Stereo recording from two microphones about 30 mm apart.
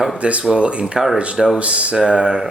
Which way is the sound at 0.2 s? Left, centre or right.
Right.